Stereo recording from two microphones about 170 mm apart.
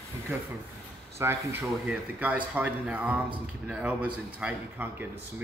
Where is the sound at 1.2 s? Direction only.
15° right (ahead or behind).